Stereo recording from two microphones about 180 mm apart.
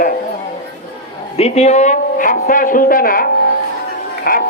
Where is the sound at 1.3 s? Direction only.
35° left (ahead or behind).